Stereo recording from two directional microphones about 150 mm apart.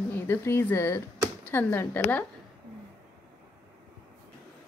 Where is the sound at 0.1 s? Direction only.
15° left (ahead or behind).